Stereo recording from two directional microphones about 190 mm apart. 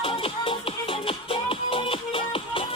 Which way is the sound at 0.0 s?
30° left (ahead or behind).